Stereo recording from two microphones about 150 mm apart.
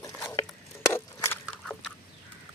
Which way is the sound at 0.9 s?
15° left (ahead or behind).